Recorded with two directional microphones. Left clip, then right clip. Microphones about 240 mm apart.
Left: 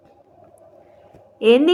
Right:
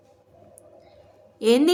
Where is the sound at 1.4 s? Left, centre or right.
Centre.